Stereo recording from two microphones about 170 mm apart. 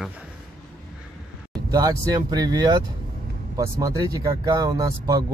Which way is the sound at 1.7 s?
20° right (ahead or behind).